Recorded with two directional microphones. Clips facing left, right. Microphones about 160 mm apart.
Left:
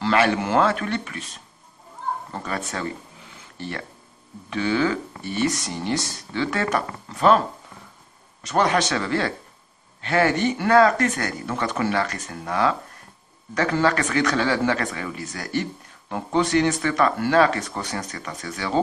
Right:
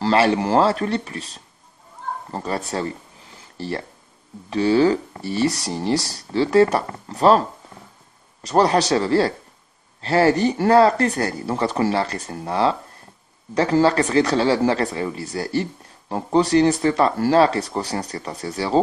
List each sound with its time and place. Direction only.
0.0 s speech: 30° right (ahead or behind)